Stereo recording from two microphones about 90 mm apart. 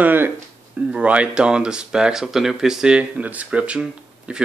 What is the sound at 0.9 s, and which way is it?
Speech, 15° right (ahead or behind).